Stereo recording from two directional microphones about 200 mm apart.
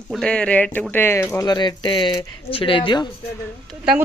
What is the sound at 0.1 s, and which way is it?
A man's voice, 5° left (ahead or behind).